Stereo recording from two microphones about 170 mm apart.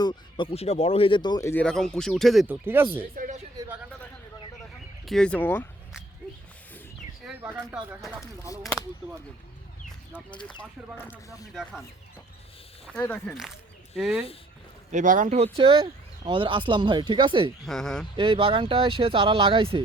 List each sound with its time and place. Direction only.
0.0 s speech: 25° left (ahead or behind)
1.6 s speech: 5° left (ahead or behind)
2.5 s speech: 10° right (ahead or behind)
3.2 s a sound: 55° right (ahead or behind)
5.0 s speech: 5° left (ahead or behind)
10.6 s speech: 10° left (ahead or behind)
12.8 s speech: 5° left (ahead or behind)
14.0 s speech: 5° right (ahead or behind)
14.9 s speech: 50° right (ahead or behind)
15.5 s speech: 30° right (ahead or behind)
17.7 s speech: 5° left (ahead or behind)
18.2 s speech: 30° right (ahead or behind)